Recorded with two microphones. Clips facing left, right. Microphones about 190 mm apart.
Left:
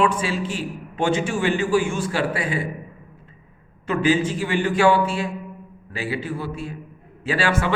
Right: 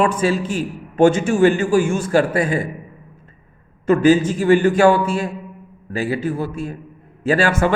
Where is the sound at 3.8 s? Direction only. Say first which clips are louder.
Right 7 dB; 45° right (ahead or behind).